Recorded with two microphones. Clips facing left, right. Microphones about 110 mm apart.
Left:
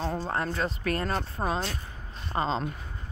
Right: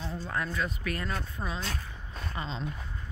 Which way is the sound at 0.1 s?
35° left (ahead or behind).